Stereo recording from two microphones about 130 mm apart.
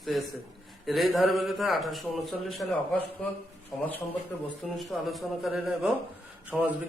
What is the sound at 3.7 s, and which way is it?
A man's voice, centre (ahead or behind).